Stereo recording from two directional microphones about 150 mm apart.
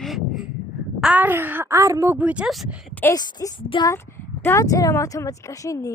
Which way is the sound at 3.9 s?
15° left (ahead or behind).